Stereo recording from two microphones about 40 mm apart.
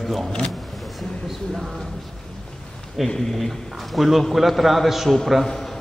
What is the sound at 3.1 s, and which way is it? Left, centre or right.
A man's voice, centre.